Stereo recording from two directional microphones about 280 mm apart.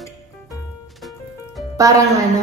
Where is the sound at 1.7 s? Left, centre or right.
Centre.